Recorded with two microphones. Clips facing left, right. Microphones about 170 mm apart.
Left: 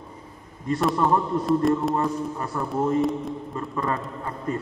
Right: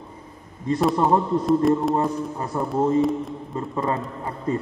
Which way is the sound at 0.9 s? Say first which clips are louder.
Right 2 dB; 25° right (ahead or behind).